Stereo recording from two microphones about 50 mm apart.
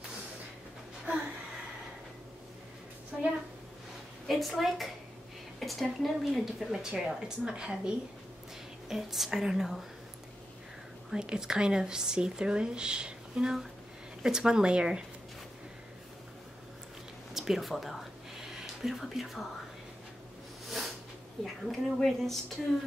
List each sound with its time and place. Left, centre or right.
3.1 s a sound: centre
4.3 s speech: centre
8.8 s speech: centre
11.1 s speech: centre
17.3 s speech: centre
20.6 s a sound: centre
21.6 s speech: centre